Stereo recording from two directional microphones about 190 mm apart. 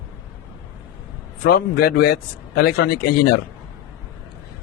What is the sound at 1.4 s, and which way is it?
Speech, 55° left (ahead or behind).